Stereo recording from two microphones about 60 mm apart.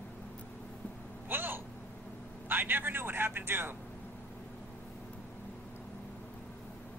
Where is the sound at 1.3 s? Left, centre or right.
Right.